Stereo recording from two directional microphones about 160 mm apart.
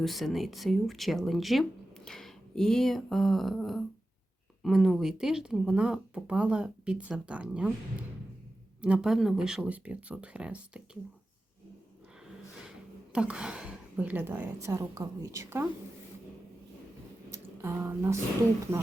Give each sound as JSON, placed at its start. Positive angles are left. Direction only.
{"t": 0.0, "sound": "speech", "side_deg": 0}
{"t": 8.8, "sound": "a woman's voice", "side_deg": -5}
{"t": 13.1, "sound": "a woman's voice", "side_deg": -5}
{"t": 17.3, "sound": "speech", "side_deg": -15}